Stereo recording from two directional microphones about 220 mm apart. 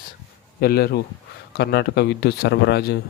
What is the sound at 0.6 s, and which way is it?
A man's voice, 45° left (ahead or behind).